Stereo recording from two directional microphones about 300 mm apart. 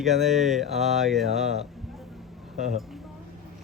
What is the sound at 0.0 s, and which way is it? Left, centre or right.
Speech, centre.